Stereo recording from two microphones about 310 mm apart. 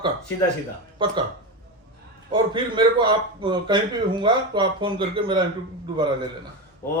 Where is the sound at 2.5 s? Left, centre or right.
Centre.